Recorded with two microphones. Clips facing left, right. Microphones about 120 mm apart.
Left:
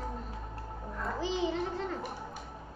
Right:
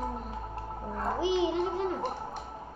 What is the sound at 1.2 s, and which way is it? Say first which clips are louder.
Speech: right 5 dB; 15° right (ahead or behind).